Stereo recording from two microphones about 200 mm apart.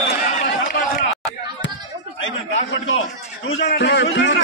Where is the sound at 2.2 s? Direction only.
75° left (ahead or behind).